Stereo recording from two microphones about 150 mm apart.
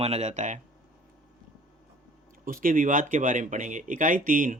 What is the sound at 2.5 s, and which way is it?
Speech, 65° right (ahead or behind).